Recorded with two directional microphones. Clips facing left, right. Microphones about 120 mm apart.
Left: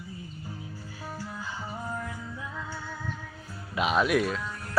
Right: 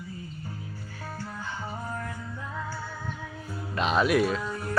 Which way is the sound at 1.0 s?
10° left (ahead or behind).